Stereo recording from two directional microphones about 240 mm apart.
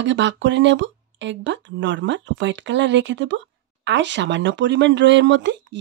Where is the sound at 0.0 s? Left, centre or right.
Right.